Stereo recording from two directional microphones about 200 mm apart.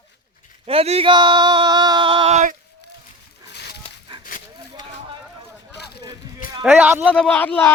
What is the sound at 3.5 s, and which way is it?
Dog, 55° left (ahead or behind).